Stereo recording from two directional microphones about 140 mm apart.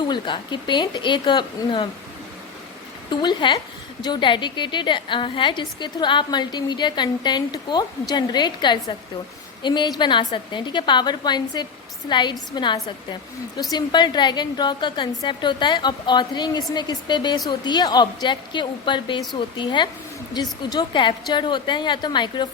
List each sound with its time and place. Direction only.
0.0 s a woman's voice: 30° left (ahead or behind)
3.1 s a woman's voice: 30° left (ahead or behind)